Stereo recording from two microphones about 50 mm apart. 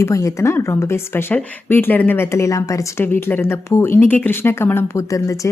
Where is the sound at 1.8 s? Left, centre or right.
Left.